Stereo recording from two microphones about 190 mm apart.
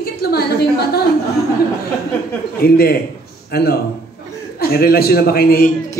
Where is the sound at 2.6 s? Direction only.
55° left (ahead or behind).